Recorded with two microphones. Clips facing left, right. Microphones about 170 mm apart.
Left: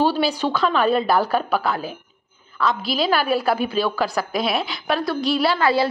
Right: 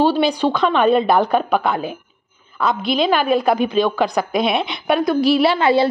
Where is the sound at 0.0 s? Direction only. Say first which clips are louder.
Right 4 dB; 10° left (ahead or behind).